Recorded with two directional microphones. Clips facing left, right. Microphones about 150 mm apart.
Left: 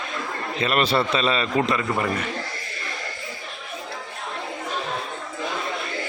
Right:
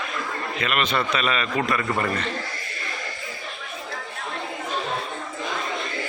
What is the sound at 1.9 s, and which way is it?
Speech, 10° left (ahead or behind).